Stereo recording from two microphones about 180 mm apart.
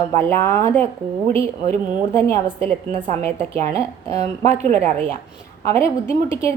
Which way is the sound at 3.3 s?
35° right (ahead or behind).